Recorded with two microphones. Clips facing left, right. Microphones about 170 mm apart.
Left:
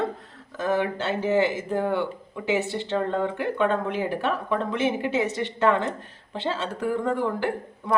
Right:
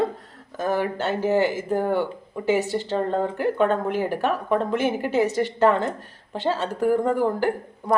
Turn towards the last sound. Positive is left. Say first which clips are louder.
# right 3 dB
turn(degrees=-40)  # may be behind; listen again after turning